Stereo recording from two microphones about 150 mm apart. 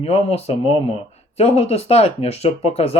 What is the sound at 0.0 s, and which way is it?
Speech, 45° left (ahead or behind).